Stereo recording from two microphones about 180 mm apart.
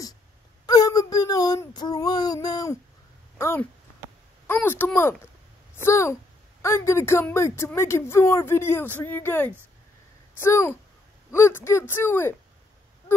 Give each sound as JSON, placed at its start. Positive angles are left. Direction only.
{"t": 0.7, "sound": "child singing", "side_deg": 20}
{"t": 3.3, "sound": "speech", "side_deg": 15}